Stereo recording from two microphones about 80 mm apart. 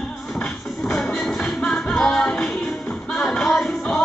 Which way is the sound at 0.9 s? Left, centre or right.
Centre.